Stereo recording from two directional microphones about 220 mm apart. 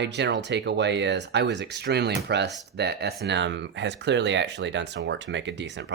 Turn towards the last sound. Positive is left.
turn(degrees=-55)  # may be behind; listen again after turning